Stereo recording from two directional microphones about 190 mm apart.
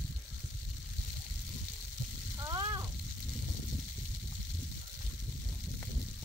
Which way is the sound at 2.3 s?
20° right (ahead or behind).